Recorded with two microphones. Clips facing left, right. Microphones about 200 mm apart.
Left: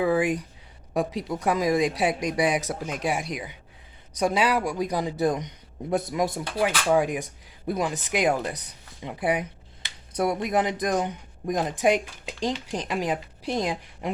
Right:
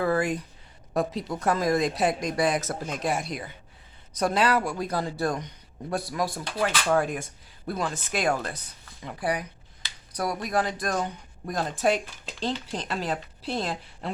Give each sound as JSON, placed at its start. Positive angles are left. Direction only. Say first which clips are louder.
{"t": 0.0, "sound": "speech", "louder": "left 2 dB", "side_deg": 15}
{"t": 6.6, "sound": "speech", "louder": "left 2 dB", "side_deg": 10}